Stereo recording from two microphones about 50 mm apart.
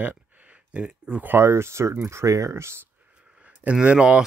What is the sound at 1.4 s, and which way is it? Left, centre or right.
Speech, right.